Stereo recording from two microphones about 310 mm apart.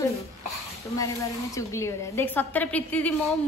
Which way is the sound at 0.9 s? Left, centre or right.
Centre.